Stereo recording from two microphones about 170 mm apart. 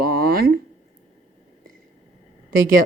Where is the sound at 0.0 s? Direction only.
60° right (ahead or behind).